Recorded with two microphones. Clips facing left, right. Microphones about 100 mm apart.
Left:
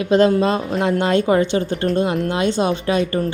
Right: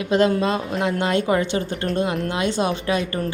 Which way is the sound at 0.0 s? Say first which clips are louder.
Left 4 dB; 30° left (ahead or behind).